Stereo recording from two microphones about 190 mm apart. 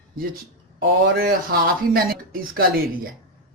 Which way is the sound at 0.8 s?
50° right (ahead or behind).